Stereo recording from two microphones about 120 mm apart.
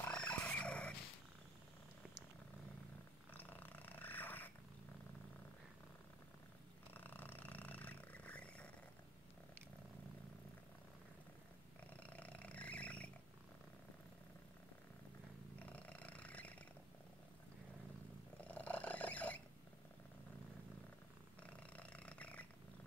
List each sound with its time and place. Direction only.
0.0 s a sound: 10° left (ahead or behind)
3.3 s purr: 15° left (ahead or behind)
6.9 s a sound: 15° left (ahead or behind)
11.9 s roar: 10° left (ahead or behind)
15.6 s purr: 10° left (ahead or behind)
18.5 s purr: 10° left (ahead or behind)
21.4 s purr: 10° left (ahead or behind)